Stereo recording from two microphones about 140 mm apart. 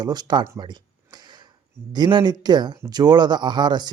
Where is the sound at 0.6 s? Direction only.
30° right (ahead or behind).